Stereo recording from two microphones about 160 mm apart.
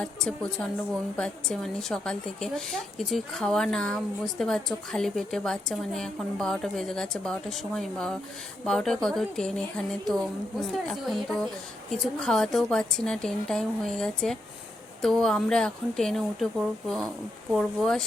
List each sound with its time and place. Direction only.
0.0 s a woman's voice: 5° left (ahead or behind)